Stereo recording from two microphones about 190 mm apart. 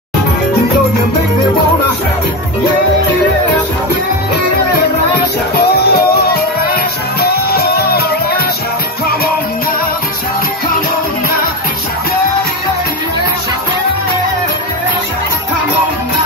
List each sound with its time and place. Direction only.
5.6 s music: 55° left (ahead or behind)